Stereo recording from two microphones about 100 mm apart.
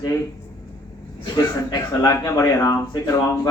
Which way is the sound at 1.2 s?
40° left (ahead or behind).